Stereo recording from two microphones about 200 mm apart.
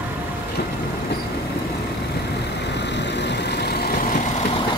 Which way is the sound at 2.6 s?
60° left (ahead or behind).